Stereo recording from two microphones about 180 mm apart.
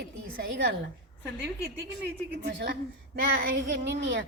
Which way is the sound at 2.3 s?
70° right (ahead or behind).